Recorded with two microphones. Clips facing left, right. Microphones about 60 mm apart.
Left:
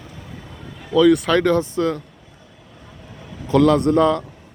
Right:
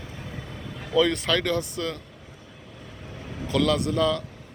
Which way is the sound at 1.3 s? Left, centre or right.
Left.